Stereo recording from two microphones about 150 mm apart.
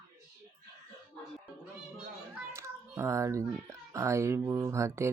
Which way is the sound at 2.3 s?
20° right (ahead or behind).